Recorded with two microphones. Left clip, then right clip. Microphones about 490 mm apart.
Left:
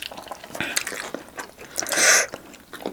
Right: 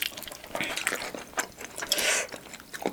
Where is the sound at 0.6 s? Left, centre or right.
Left.